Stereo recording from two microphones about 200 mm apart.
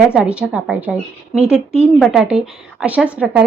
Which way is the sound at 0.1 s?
5° right (ahead or behind).